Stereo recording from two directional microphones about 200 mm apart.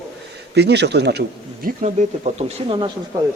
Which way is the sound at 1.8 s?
35° right (ahead or behind).